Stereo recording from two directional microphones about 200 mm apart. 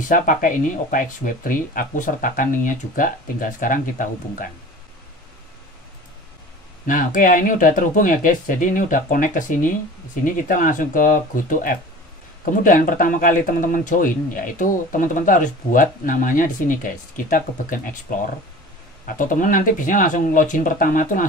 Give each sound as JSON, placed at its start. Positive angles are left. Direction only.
{"t": 0.1, "sound": "speech", "side_deg": 40}
{"t": 6.9, "sound": "speech", "side_deg": 45}
{"t": 19.0, "sound": "speech", "side_deg": 40}